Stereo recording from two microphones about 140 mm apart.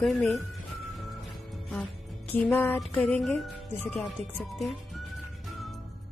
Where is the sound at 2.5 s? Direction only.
20° left (ahead or behind).